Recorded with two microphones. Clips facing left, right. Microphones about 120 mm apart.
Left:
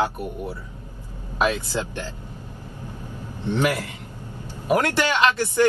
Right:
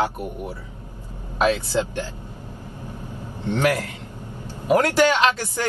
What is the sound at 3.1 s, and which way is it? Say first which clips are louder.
Vehicle: right 1 dB; 15° right (ahead or behind).